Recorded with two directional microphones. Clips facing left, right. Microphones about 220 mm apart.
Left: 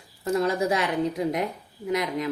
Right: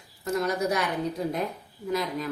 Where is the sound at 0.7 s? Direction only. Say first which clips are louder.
Left 3 dB; 25° left (ahead or behind).